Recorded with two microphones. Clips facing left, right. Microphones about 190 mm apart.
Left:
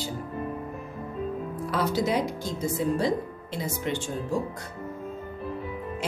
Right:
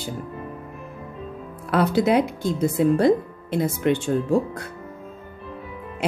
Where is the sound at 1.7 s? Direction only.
60° right (ahead or behind).